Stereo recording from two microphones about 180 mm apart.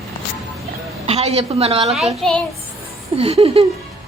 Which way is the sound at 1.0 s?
35° right (ahead or behind).